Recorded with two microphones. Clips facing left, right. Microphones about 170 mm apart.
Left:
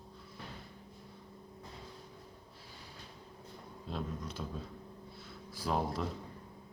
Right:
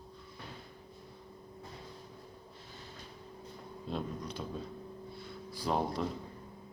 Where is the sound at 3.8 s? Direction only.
Centre (ahead or behind).